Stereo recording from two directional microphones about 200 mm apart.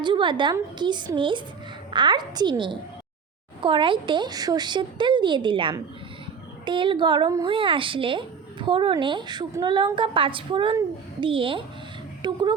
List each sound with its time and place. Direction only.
0.0 s a woman's voice: 25° right (ahead or behind)